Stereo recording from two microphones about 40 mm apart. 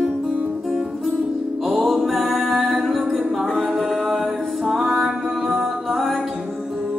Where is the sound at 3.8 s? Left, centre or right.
Centre.